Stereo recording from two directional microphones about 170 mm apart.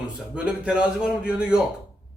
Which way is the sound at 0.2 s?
5° right (ahead or behind).